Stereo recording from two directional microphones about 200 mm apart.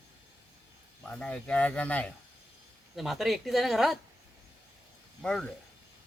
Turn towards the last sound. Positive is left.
turn(degrees=5)  # may be behind; listen again after turning